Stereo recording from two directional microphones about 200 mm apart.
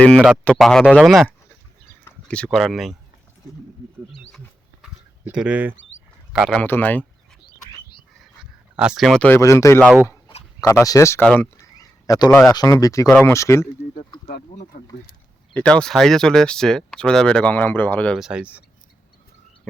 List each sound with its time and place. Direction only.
0.4 s speech: 5° left (ahead or behind)
4.8 s a sound: 5° right (ahead or behind)
6.3 s speech: 5° right (ahead or behind)
6.6 s speech: 10° left (ahead or behind)
8.2 s speech: 5° right (ahead or behind); by 9.9 s 15° left (ahead or behind)
10.2 s a sound: 25° left (ahead or behind)
10.7 s speech: 15° left (ahead or behind)
12.3 s speech: centre (ahead or behind)
12.5 s speech: 15° left (ahead or behind)
14.7 s speech: 40° left (ahead or behind)
15.5 s speech: 5° left (ahead or behind)